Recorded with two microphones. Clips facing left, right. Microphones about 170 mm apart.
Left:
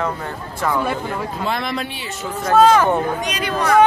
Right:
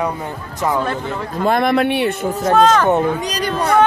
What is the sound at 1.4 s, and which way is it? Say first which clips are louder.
Speech: right 12 dB; 55° right (ahead or behind).